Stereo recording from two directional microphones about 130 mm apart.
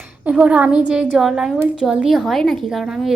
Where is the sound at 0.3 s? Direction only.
10° right (ahead or behind).